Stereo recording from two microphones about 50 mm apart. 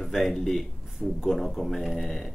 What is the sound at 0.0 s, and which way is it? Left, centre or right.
Speech, centre.